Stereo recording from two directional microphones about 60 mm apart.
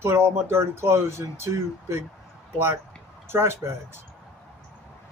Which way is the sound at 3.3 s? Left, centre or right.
Right.